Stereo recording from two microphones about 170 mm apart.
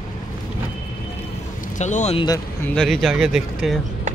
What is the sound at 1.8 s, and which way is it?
Speech, 45° left (ahead or behind).